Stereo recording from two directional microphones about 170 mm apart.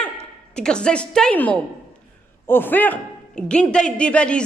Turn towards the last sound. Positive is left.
turn(degrees=5)  # may be behind; listen again after turning